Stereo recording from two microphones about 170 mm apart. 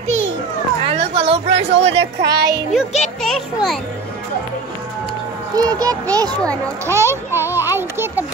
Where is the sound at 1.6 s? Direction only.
90° right.